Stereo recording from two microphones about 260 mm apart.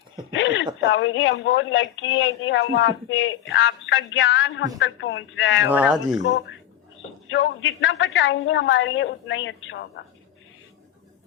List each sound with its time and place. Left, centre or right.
0.3 s a sound: left
0.9 s a woman's voice: left
5.6 s speech: centre
7.3 s a woman's voice: left